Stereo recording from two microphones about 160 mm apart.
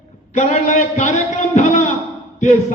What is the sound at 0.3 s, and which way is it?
A man's voice, 45° left (ahead or behind).